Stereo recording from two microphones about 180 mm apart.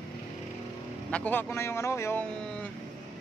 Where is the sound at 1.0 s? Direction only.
10° left (ahead or behind).